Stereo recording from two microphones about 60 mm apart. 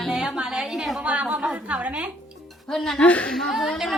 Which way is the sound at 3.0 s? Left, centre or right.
Left.